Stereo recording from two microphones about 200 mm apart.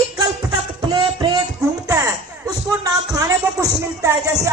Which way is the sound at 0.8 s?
20° right (ahead or behind).